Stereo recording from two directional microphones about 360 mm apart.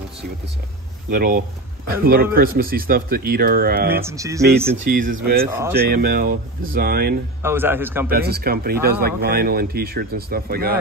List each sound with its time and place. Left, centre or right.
1.1 s speech: right
4.0 s speech: centre
4.7 s speech: right
5.5 s speech: centre
5.9 s speech: right
7.4 s a man's voice: centre
8.1 s speech: right